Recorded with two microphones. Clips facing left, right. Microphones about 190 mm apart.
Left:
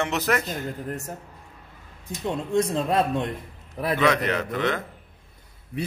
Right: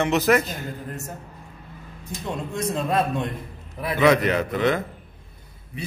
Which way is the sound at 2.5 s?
30° left (ahead or behind).